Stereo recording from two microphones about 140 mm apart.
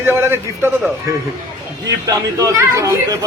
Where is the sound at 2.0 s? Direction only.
25° right (ahead or behind).